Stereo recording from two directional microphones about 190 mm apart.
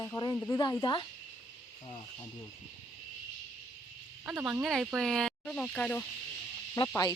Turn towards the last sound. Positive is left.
turn(degrees=20)  # may be behind; listen again after turning